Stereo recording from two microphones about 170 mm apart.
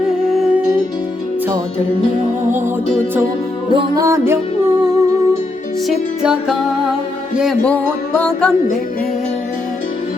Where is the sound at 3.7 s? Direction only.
30° right (ahead or behind).